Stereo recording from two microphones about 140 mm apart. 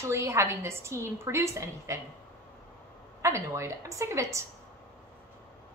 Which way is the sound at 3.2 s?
20° right (ahead or behind).